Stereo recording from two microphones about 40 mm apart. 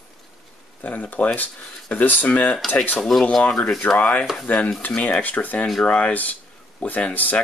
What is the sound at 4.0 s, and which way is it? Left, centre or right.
Speech, left.